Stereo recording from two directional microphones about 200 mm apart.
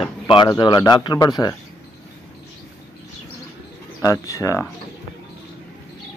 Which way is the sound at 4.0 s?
15° left (ahead or behind).